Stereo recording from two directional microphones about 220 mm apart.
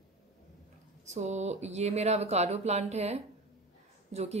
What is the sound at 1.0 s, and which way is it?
Speech, 30° right (ahead or behind).